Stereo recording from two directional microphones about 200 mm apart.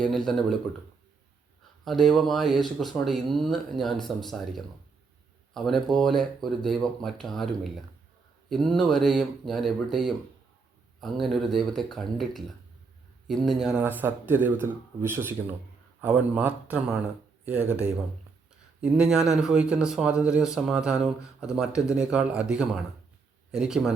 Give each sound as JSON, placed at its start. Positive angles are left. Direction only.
{"t": 0.0, "sound": "speech", "side_deg": 0}
{"t": 1.8, "sound": "speech", "side_deg": 0}
{"t": 18.8, "sound": "speech", "side_deg": -5}